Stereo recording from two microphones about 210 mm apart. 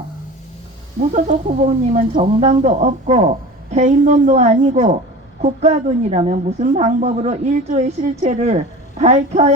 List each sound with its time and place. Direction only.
1.1 s a woman's voice: 35° right (ahead or behind)